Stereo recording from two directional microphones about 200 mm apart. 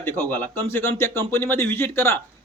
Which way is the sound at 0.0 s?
10° left (ahead or behind).